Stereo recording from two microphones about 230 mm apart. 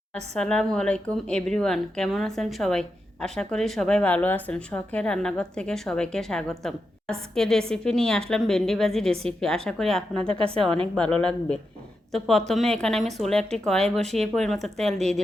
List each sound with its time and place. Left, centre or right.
0.3 s a woman's voice: centre
10.2 s a woman's voice: right
10.9 s a woman's voice: centre